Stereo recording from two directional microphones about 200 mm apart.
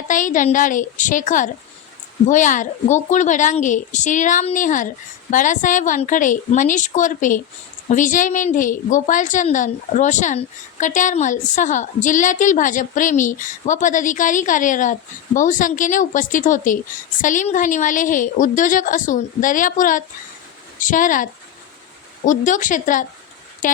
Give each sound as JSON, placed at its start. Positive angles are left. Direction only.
{"t": 0.1, "sound": "a woman's voice", "side_deg": 40}